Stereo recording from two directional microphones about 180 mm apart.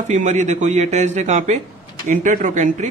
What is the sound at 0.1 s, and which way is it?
A man's voice, 40° right (ahead or behind).